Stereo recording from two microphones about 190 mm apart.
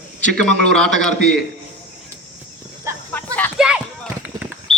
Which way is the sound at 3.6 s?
5° right (ahead or behind).